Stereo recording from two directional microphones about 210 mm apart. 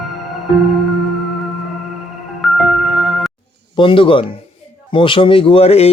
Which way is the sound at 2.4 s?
Centre (ahead or behind).